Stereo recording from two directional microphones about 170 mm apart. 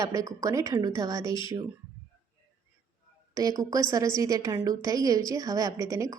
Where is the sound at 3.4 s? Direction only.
20° right (ahead or behind).